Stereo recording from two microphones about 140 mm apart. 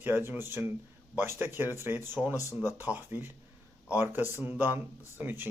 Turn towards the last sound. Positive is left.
turn(degrees=-15)  # may be behind; listen again after turning